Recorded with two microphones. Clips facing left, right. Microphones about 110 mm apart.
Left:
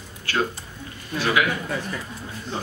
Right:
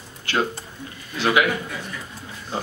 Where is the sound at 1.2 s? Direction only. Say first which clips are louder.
Right 2 dB; 20° right (ahead or behind).